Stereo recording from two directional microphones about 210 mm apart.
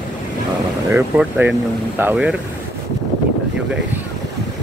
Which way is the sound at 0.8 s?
10° right (ahead or behind).